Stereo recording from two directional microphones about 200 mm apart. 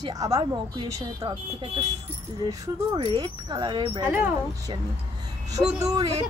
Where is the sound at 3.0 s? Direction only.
25° right (ahead or behind).